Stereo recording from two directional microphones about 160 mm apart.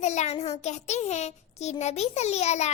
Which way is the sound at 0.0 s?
45° left (ahead or behind).